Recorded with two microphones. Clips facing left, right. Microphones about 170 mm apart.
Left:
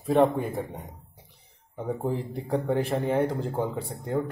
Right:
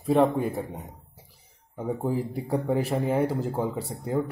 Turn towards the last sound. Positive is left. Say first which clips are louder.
# right 1 dB
turn(degrees=-5)  # may be behind; listen again after turning